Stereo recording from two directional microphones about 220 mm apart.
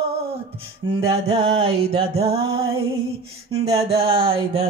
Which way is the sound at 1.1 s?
25° right (ahead or behind).